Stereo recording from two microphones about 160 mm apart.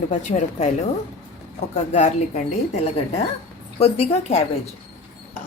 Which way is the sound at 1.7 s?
45° left (ahead or behind).